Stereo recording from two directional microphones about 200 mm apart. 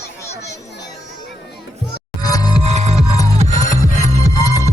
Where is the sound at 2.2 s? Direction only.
20° left (ahead or behind).